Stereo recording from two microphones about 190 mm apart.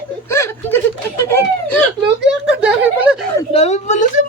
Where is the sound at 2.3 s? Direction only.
5° right (ahead or behind).